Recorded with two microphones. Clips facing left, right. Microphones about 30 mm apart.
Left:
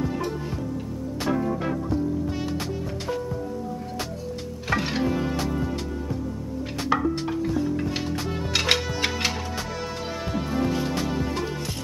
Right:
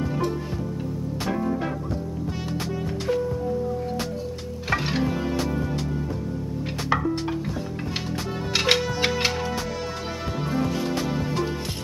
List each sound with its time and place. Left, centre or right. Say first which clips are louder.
4.6 s music: even; centre
6.9 s music: even; centre
8.5 s music: right 2 dB; centre